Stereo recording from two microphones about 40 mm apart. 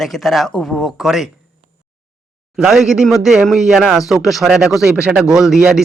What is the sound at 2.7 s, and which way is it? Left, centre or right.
A man's voice, centre.